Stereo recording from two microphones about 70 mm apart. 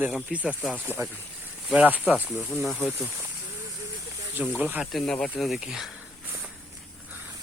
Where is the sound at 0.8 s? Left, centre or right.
Right.